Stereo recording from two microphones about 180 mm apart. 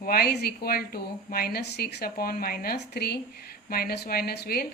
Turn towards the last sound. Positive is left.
turn(degrees=60)  # may be behind; listen again after turning